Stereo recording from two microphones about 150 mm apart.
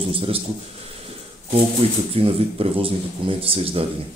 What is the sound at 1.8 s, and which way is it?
A man's voice, 45° right (ahead or behind).